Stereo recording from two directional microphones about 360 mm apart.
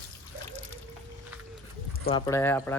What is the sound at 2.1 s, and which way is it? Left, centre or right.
Speech, centre.